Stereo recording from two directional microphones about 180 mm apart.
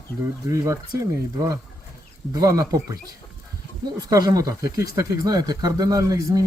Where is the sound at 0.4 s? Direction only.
15° right (ahead or behind).